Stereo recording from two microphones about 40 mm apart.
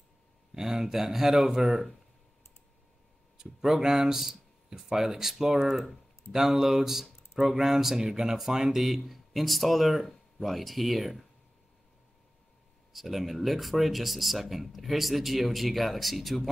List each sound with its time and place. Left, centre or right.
0.6 s speech: centre
3.3 s speech: centre
12.9 s speech: centre